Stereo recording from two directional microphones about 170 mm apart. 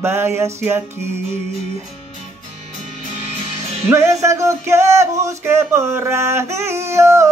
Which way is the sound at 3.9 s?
15° right (ahead or behind).